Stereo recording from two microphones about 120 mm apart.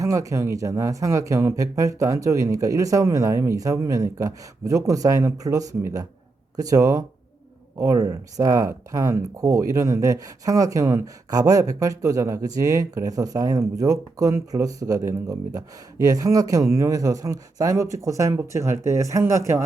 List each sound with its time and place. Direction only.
0.0 s speech: 25° right (ahead or behind)